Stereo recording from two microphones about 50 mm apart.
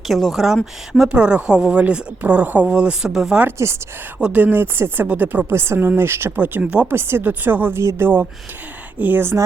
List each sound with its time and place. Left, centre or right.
0.1 s speech: centre
0.4 s speech: centre
1.1 s speech: right
3.0 s speech: centre
3.6 s speech: right
4.3 s speech: right
5.5 s speech: right
6.3 s speech: right
6.6 s speech: right
6.9 s speech: right
7.7 s speech: right
9.0 s speech: right